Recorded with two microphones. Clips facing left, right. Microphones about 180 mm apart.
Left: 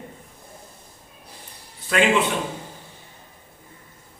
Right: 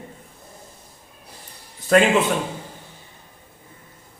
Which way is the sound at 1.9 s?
45° right (ahead or behind).